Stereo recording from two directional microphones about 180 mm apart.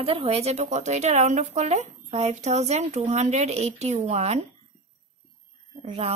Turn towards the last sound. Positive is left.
turn(degrees=-35)  # may be behind; listen again after turning